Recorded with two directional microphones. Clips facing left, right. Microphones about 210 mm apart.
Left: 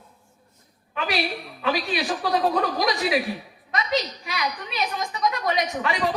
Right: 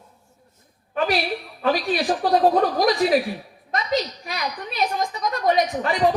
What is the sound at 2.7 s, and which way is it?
Speech, 45° right (ahead or behind).